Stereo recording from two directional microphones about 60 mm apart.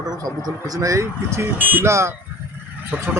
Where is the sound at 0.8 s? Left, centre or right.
Right.